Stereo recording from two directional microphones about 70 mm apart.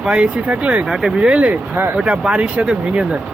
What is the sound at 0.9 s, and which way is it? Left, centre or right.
Speech, centre.